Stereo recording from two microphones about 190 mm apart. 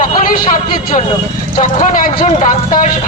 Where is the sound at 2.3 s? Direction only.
35° left (ahead or behind).